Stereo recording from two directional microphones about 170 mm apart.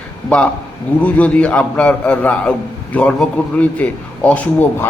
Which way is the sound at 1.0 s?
10° left (ahead or behind).